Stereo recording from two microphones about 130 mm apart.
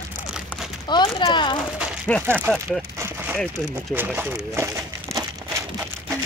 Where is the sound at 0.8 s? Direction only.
35° left (ahead or behind).